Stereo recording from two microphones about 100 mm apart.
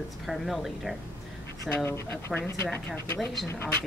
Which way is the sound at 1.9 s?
25° left (ahead or behind).